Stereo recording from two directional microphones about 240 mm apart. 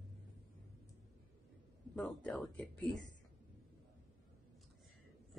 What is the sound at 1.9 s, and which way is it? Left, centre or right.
Speech, centre.